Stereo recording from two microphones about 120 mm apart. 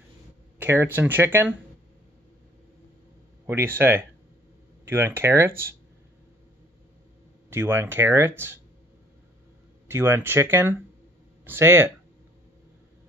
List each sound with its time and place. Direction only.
0.6 s speech: 20° right (ahead or behind)
3.4 s speech: 20° right (ahead or behind)
7.4 s speech: 20° right (ahead or behind)
9.8 s speech: 20° right (ahead or behind)